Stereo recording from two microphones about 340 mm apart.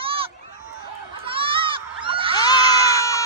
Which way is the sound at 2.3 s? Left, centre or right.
Centre.